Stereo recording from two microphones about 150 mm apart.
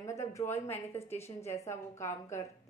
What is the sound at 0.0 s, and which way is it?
A woman's voice, 20° left (ahead or behind).